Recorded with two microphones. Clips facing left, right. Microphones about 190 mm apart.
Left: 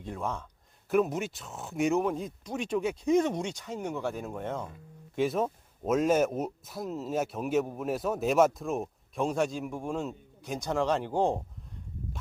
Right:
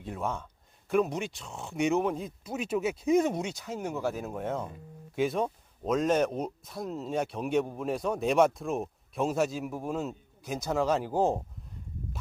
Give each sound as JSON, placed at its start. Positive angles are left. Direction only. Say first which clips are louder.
{"t": 0.0, "sound": "speech", "louder": "right 1 dB", "side_deg": -5}